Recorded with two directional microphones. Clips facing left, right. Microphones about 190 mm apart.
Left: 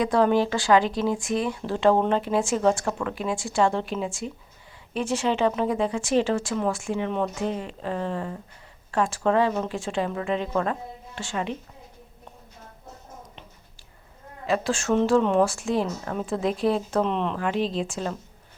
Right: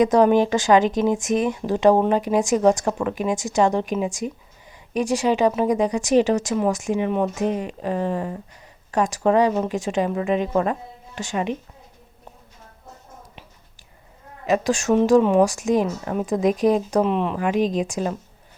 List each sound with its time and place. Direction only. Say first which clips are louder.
0.0 s a woman's voice: right 5 dB; 20° right (ahead or behind)
14.4 s a woman's voice: right 4 dB; 15° right (ahead or behind)